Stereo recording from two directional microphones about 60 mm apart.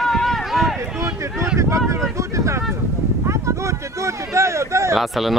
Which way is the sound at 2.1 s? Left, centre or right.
Right.